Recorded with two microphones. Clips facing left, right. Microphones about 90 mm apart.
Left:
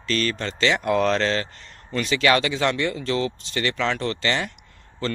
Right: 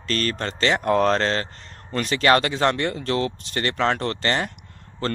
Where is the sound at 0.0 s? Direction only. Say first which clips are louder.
Even; 45° right (ahead or behind).